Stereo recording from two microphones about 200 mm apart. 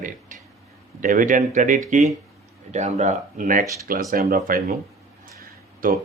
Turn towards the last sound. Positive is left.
turn(degrees=-45)  # may be behind; listen again after turning